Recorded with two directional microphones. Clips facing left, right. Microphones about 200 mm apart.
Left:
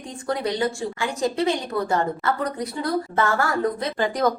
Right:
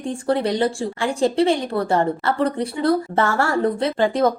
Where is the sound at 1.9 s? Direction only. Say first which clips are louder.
Right 4 dB; 30° right (ahead or behind).